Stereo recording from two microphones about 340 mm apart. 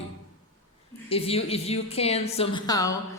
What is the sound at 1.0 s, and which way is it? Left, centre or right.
A woman's voice, centre.